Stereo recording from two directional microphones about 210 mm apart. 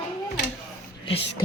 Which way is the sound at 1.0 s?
25° left (ahead or behind).